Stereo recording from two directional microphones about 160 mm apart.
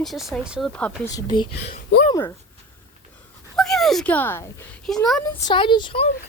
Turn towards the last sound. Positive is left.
turn(degrees=35)  # may be behind; listen again after turning